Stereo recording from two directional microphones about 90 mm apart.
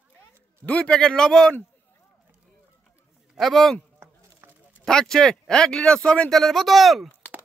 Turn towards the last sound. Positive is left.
turn(degrees=0)  # may be behind; listen again after turning